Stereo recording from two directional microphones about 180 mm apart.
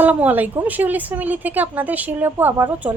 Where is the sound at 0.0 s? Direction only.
10° right (ahead or behind).